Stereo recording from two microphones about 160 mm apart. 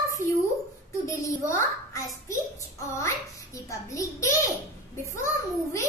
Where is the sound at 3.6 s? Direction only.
20° left (ahead or behind).